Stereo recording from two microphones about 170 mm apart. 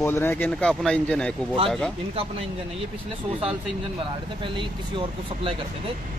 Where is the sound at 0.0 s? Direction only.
15° left (ahead or behind).